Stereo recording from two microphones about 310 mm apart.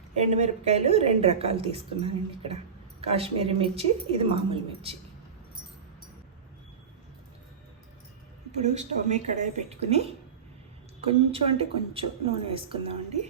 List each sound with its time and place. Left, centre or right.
0.2 s a woman's voice: right
8.6 s a woman's voice: right